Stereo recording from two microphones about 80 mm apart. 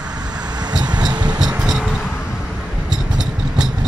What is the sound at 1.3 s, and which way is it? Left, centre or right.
Music, centre.